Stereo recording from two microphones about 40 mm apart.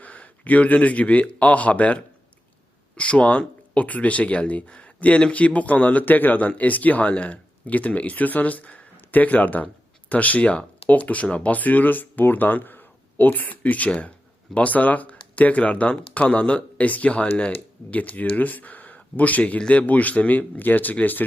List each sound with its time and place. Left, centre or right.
0.0 s a man's voice: left